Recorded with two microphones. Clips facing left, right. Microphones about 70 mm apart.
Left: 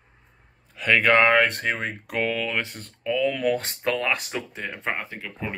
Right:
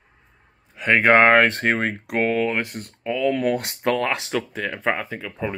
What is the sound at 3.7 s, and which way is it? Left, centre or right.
Speech, right.